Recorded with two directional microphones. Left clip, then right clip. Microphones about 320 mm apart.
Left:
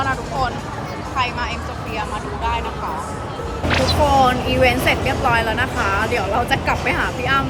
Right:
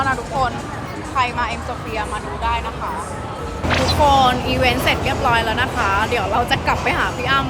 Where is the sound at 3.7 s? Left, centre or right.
Centre.